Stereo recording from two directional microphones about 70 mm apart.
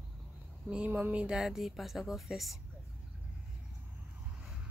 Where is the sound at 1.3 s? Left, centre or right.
Centre.